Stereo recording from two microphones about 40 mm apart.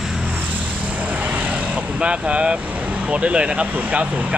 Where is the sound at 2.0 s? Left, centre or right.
Right.